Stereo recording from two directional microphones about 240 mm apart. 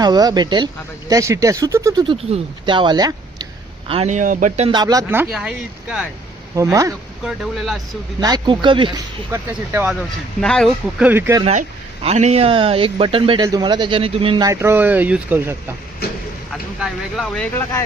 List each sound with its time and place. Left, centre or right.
0.0 s speech: centre
6.6 s speech: centre
7.5 s speech: centre
8.2 s a man's voice: centre
9.3 s speech: centre
12.0 s a man's voice: right; by 17.8 s centre